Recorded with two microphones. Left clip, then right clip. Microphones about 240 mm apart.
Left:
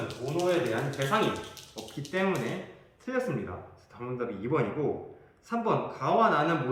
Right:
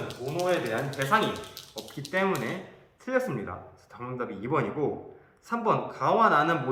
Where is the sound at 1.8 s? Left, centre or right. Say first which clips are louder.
Right 2 dB; right.